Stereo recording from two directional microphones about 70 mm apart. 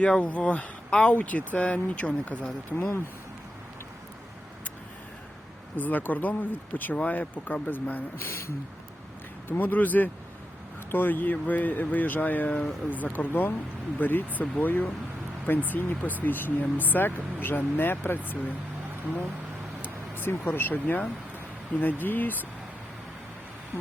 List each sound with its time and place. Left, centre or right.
0.0 s speech: centre
2.7 s speech: left
5.7 s speech: left
9.5 s speech: left
20.2 s speech: left
21.7 s speech: centre
22.0 s speech: left